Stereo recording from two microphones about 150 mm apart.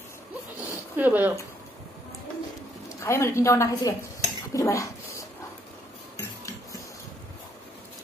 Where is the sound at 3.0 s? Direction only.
20° left (ahead or behind).